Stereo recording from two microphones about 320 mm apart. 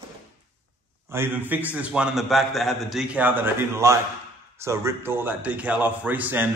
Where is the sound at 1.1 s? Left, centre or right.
Centre.